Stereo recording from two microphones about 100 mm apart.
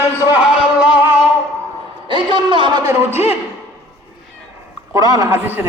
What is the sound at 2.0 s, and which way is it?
Speech, 55° right (ahead or behind).